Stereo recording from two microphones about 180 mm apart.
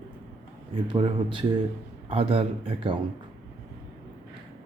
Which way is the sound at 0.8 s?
30° right (ahead or behind).